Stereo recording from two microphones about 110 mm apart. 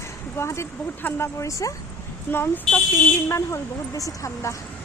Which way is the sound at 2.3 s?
20° left (ahead or behind).